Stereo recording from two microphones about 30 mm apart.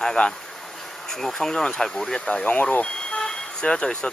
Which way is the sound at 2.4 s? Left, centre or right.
Left.